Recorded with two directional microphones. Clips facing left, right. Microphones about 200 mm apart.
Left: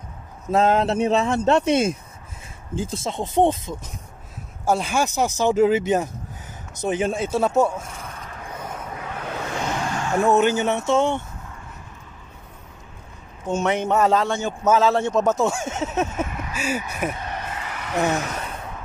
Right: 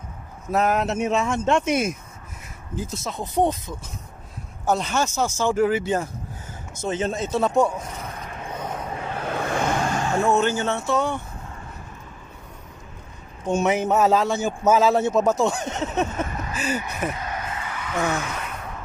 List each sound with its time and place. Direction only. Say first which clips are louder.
0.5 s speech: left 3 dB; 25° left (ahead or behind)
4.6 s speech: left 1 dB; 10° left (ahead or behind)
8.3 s vehicle: right 3 dB; 25° right (ahead or behind)
9.2 s vehicle: right 4 dB; 55° right (ahead or behind)
10.2 s speech: left 4 dB; 15° left (ahead or behind)
13.5 s a man's voice: right 1 dB; 10° right (ahead or behind); by 17.1 s 10° left (ahead or behind)
18.1 s gasp: left 2 dB; 40° left (ahead or behind)